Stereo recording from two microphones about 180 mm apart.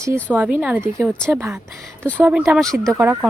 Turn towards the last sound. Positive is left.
turn(degrees=-10)  # may be behind; listen again after turning